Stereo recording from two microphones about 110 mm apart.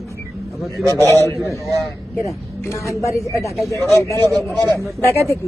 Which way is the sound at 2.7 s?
30° left (ahead or behind).